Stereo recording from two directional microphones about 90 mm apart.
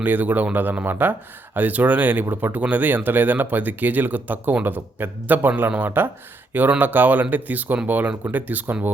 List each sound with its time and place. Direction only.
0.0 s speech: 20° right (ahead or behind)